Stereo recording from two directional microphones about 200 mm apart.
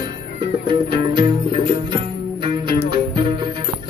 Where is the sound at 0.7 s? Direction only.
25° right (ahead or behind).